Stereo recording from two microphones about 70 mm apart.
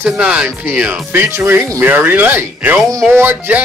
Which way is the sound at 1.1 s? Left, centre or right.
Right.